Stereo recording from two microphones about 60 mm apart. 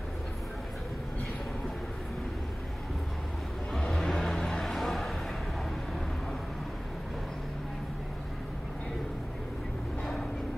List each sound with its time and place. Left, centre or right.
3.9 s vehicle: centre